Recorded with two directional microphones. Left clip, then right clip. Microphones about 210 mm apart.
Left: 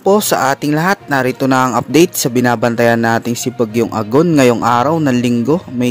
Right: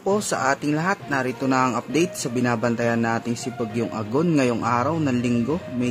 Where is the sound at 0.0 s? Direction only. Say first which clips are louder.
Left 10 dB; 35° left (ahead or behind).